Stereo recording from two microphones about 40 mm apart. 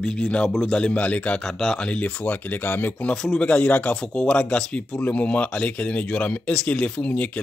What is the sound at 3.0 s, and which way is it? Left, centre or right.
Speech, left.